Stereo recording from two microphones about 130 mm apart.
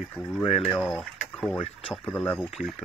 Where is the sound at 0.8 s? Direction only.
Centre (ahead or behind).